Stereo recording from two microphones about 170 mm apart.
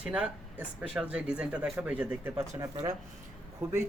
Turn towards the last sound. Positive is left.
turn(degrees=-15)  # may be behind; listen again after turning